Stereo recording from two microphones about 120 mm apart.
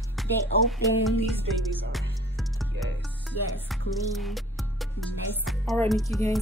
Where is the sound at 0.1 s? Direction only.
Centre (ahead or behind).